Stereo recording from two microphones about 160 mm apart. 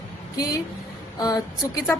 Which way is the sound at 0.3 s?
25° left (ahead or behind).